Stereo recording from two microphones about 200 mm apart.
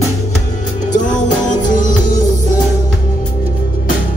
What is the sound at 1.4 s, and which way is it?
Music, 40° left (ahead or behind).